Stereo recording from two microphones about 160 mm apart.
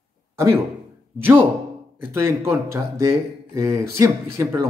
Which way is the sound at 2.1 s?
20° right (ahead or behind).